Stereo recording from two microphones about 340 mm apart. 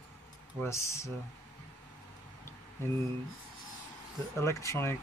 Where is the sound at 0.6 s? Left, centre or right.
Centre.